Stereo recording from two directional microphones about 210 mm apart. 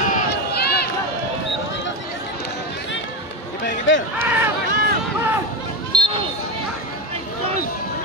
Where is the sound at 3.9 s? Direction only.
65° left (ahead or behind).